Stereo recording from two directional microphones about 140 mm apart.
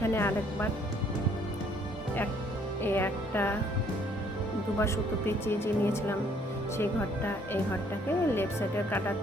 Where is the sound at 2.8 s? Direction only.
15° left (ahead or behind).